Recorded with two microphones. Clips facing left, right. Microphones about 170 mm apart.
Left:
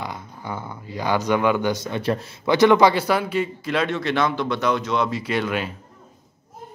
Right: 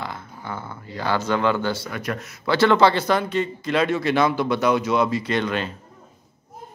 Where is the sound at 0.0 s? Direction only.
15° left (ahead or behind).